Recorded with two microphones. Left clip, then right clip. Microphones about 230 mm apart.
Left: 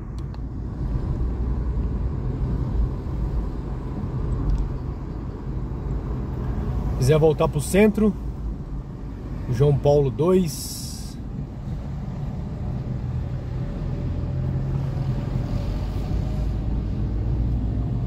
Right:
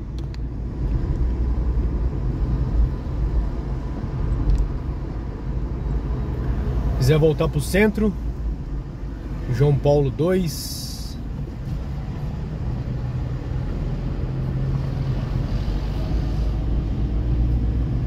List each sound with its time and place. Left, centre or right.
7.1 s speech: centre
9.6 s speech: centre